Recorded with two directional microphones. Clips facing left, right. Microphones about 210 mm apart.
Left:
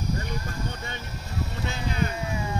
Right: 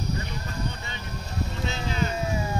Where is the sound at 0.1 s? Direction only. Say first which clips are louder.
Left 1 dB; 50° left (ahead or behind).